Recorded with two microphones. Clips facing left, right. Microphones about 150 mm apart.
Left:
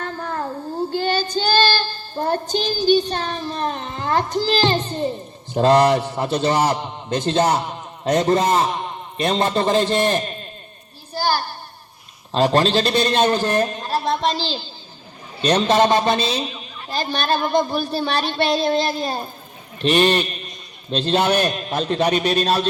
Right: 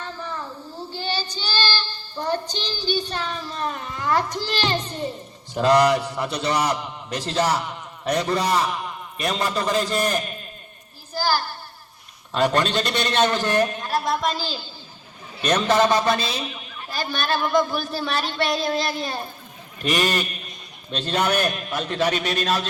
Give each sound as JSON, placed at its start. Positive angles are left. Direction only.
{"t": 0.0, "sound": "child singing", "side_deg": 55}
{"t": 3.2, "sound": "a man's voice", "side_deg": 40}
{"t": 3.6, "sound": "a child's voice", "side_deg": 25}
{"t": 11.2, "sound": "a sound", "side_deg": 20}
{"t": 12.3, "sound": "a man's voice", "side_deg": 25}
{"t": 15.4, "sound": "a man's voice", "side_deg": 25}